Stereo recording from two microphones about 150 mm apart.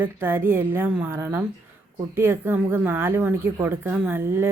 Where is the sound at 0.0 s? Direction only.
15° right (ahead or behind).